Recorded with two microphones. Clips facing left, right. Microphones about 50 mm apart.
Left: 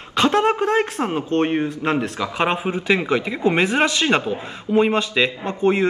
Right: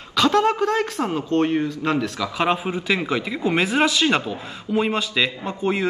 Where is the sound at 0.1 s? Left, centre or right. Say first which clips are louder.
Left 1 dB; left.